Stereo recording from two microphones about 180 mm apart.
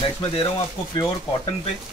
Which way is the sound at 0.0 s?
30° left (ahead or behind).